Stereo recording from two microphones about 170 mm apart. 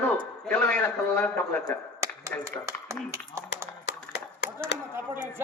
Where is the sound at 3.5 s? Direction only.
90° left.